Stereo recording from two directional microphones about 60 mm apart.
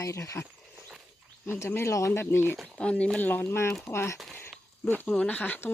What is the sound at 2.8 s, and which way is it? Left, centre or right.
Speech, centre.